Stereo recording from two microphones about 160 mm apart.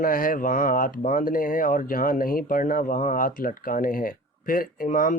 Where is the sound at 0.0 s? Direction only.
60° left (ahead or behind).